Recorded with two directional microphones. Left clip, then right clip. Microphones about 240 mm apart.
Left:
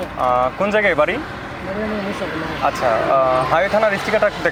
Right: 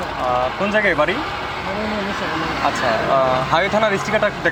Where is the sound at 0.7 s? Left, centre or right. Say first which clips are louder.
Even; centre.